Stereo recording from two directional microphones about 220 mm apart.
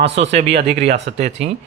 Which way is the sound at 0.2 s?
25° right (ahead or behind).